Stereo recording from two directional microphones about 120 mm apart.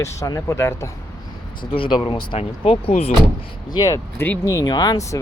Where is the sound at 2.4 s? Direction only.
55° left (ahead or behind).